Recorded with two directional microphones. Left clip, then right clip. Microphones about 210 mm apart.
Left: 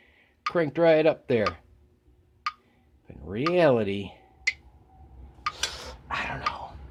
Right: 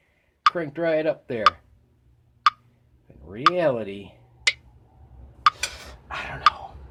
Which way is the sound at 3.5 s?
45° left (ahead or behind).